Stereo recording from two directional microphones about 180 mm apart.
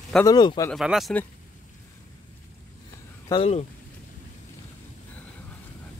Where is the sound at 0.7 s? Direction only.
Centre (ahead or behind).